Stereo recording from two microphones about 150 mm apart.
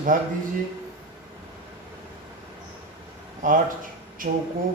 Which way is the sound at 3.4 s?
65° right (ahead or behind).